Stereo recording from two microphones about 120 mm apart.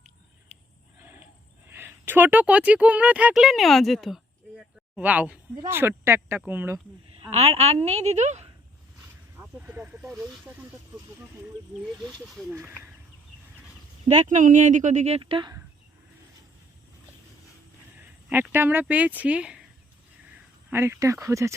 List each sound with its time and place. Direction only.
0.9 s a sound: 20° right (ahead or behind)
1.6 s speech: 20° right (ahead or behind); by 4.6 s centre (ahead or behind)
4.9 s speech: 10° right (ahead or behind)
7.2 s a woman's voice: 60° right (ahead or behind)
9.4 s snake: 15° right (ahead or behind)
10.0 s speech: 5° right (ahead or behind)
12.2 s speech: centre (ahead or behind)
12.5 s speech: 20° right (ahead or behind)
14.1 s speech: 80° right
15.2 s speech: 45° right (ahead or behind)
18.0 s a sound: 20° right (ahead or behind)
18.5 s speech: 20° right (ahead or behind)
20.7 s speech: 20° right (ahead or behind)